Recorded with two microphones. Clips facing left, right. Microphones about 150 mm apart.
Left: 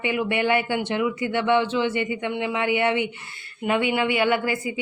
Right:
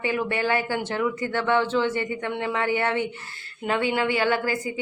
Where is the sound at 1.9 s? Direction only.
40° right (ahead or behind).